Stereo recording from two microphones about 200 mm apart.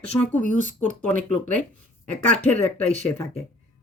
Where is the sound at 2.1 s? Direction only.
5° left (ahead or behind).